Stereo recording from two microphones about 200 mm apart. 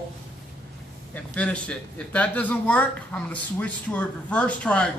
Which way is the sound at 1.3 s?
5° left (ahead or behind).